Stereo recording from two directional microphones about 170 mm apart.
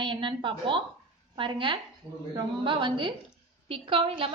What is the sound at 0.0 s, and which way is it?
A woman's voice, 30° right (ahead or behind).